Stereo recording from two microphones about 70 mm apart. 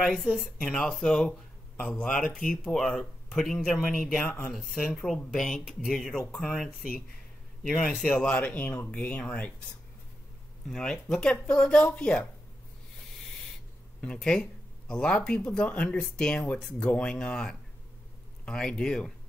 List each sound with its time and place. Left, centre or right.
0.0 s speech: centre
2.3 s speech: centre
4.2 s speech: centre
4.5 s speech: centre
8.1 s speech: left
10.7 s speech: centre
14.0 s speech: centre